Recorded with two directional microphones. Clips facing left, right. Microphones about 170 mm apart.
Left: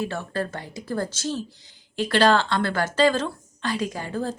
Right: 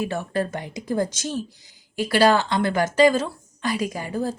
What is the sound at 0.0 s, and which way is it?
A woman's voice, 15° right (ahead or behind).